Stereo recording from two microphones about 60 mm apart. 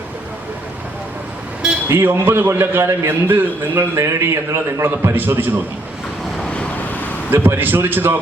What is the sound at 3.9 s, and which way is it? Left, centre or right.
Speech, right.